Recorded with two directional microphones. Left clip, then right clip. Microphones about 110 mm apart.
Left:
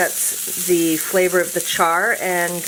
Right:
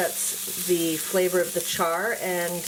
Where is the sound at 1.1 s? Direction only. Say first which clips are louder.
Left 5 dB; 40° left (ahead or behind).